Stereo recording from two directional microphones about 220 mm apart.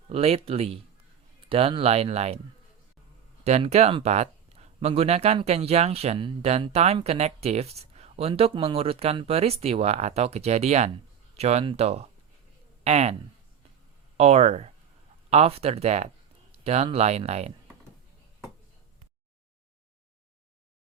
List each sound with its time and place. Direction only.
0.1 s speech: 25° right (ahead or behind)
3.4 s speech: 30° right (ahead or behind)
14.2 s speech: 30° right (ahead or behind)